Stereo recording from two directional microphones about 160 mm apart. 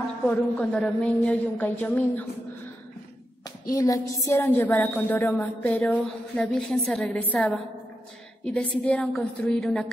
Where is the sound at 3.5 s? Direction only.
20° left (ahead or behind).